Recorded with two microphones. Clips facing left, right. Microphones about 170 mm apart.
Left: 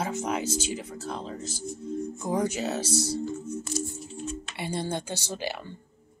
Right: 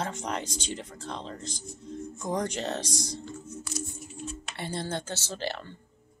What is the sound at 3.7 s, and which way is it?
Music, 30° left (ahead or behind).